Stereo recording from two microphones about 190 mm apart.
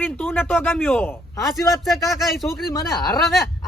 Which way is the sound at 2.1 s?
Centre (ahead or behind).